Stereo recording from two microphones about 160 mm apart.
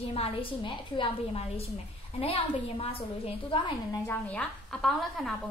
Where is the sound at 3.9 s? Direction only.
15° left (ahead or behind).